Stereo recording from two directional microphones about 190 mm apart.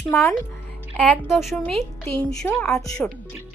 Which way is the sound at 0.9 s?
5° left (ahead or behind).